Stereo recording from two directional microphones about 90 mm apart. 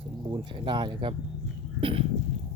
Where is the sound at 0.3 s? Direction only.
60° right (ahead or behind).